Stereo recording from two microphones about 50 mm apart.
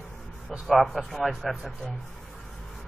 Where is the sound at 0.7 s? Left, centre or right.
Centre.